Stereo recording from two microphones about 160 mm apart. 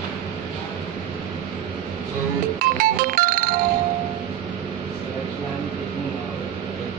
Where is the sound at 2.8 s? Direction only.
60° right (ahead or behind).